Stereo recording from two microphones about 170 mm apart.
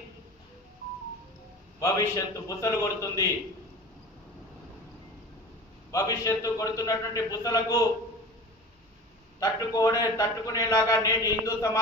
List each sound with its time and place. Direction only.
1.8 s a man's voice: 20° left (ahead or behind)
5.9 s a man's voice: 20° left (ahead or behind)
9.4 s a man's voice: 20° left (ahead or behind)